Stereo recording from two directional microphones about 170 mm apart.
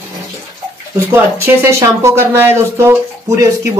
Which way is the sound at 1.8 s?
15° right (ahead or behind).